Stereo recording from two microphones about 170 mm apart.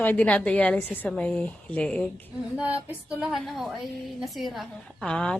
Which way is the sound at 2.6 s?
5° right (ahead or behind).